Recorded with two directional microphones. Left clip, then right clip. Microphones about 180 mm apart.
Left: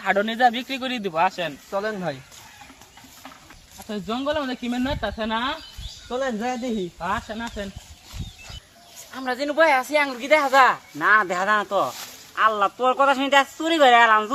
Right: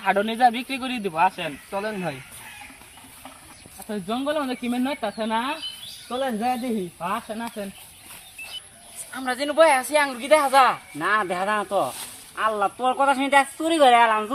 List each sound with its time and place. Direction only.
0.0 s a man's voice: 15° left (ahead or behind)
3.8 s speech: centre (ahead or behind)
9.1 s a man's voice: 30° left (ahead or behind); by 10.8 s 10° left (ahead or behind)
10.9 s speech: 10° right (ahead or behind)